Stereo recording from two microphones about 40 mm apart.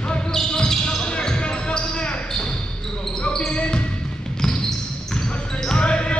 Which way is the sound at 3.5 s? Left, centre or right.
Left.